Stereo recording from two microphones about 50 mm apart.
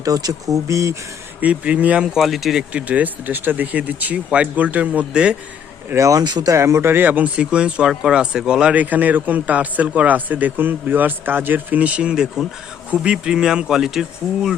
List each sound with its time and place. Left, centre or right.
0.5 s speech: right
1.4 s speech: right
2.0 s speech: centre
2.7 s speech: right
6.0 s speech: right
6.9 s speech: right
7.5 s speech: centre
8.7 s speech: right; by 14.5 s centre